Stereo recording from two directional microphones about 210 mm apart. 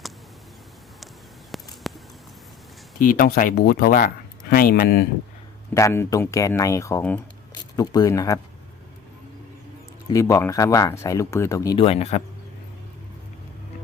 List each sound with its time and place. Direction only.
1.5 s a sound: centre (ahead or behind)
3.0 s speech: 40° left (ahead or behind)
5.7 s speech: 15° left (ahead or behind)
10.1 s speech: 15° left (ahead or behind)